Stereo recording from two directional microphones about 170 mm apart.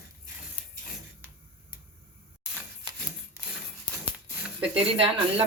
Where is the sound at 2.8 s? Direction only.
25° right (ahead or behind).